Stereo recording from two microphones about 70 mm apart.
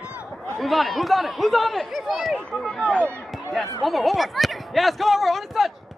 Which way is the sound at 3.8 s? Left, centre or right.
Centre.